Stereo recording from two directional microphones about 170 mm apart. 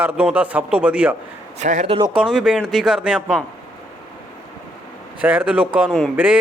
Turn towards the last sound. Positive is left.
turn(degrees=-10)  # may be behind; listen again after turning